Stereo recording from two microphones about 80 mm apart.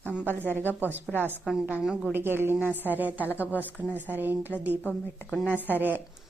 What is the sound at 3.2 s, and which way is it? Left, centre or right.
Speech, left.